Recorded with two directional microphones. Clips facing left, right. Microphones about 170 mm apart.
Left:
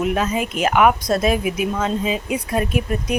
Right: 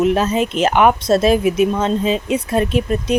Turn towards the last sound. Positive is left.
turn(degrees=-25)  # may be behind; listen again after turning